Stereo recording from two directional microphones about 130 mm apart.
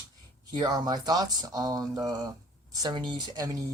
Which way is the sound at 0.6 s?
30° right (ahead or behind).